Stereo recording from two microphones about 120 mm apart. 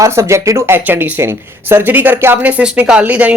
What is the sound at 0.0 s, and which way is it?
Speech, 25° right (ahead or behind).